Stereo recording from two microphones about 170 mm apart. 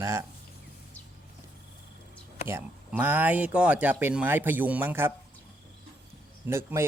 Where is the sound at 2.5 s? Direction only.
10° right (ahead or behind).